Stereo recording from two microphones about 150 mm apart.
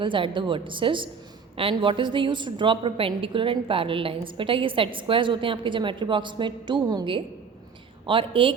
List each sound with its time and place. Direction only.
0.0 s a woman's voice: 35° right (ahead or behind)